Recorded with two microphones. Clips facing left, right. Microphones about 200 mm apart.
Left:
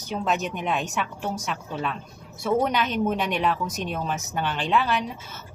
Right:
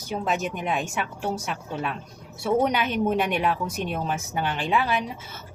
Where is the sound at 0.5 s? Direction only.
5° right (ahead or behind).